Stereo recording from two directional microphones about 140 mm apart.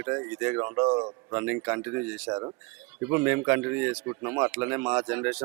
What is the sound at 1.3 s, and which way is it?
Speech, 15° right (ahead or behind).